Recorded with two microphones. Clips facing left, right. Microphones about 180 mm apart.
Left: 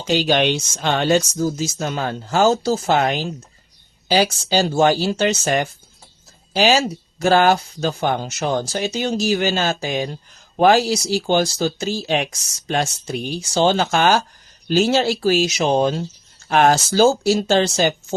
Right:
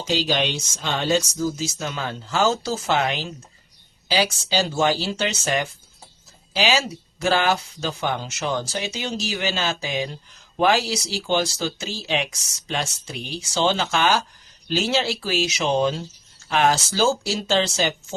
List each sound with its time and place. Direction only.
0.0 s speech: 55° left (ahead or behind)